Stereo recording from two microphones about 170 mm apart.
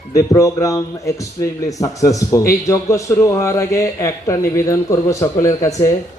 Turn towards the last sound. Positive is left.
turn(degrees=20)  # may be behind; listen again after turning